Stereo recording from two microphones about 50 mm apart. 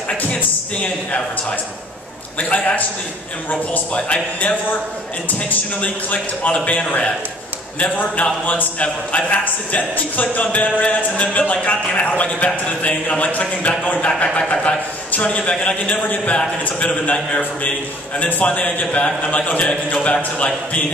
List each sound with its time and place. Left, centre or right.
0.3 s speech: left
2.3 s speech: left
5.8 s a man's voice: left